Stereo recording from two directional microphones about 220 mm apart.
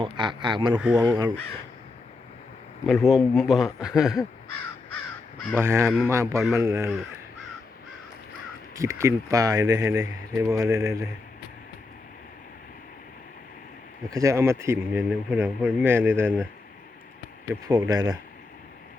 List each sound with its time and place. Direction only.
0.0 s speech: 20° right (ahead or behind)
2.8 s speech: centre (ahead or behind)
5.5 s speech: 10° right (ahead or behind)
8.7 s speech: 15° right (ahead or behind)
14.1 s speech: 15° right (ahead or behind)
17.5 s speech: 15° right (ahead or behind)